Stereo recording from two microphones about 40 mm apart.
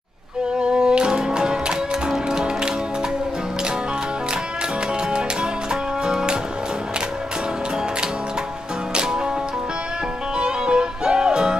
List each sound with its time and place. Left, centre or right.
0.6 s music: right
5.1 s music: centre
8.9 s music: centre
10.3 s music: right